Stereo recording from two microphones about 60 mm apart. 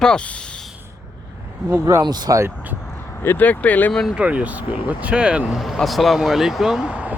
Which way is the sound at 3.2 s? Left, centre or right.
Left.